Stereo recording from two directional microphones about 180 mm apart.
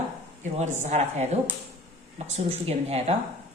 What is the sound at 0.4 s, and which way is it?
Speech, 40° right (ahead or behind).